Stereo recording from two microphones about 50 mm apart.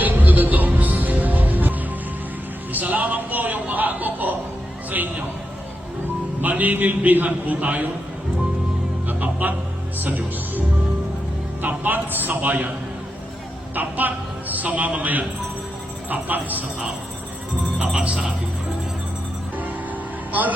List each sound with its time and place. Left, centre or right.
0.0 s music: right
2.7 s music: right
4.9 s a sound: right
6.4 s speech: right
9.0 s music: right
11.6 s a sound: right
13.7 s a man's voice: right
17.7 s speech: right